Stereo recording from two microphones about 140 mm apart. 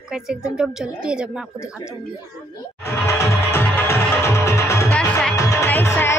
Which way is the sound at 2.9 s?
20° left (ahead or behind).